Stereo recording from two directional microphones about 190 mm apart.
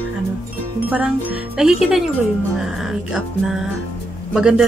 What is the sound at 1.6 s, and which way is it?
Speech, 5° right (ahead or behind).